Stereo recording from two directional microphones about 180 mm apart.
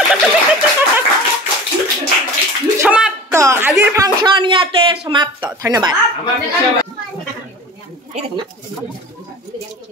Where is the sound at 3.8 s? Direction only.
15° right (ahead or behind).